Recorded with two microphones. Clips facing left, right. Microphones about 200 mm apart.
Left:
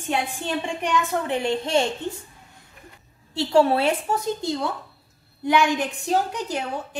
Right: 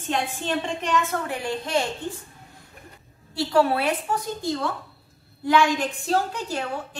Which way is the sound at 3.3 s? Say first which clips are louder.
Left 2 dB; 25° left (ahead or behind).